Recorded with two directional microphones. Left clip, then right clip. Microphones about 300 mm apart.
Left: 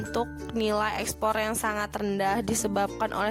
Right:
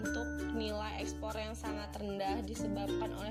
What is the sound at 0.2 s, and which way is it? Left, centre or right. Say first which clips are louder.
Speech: left 9 dB; left.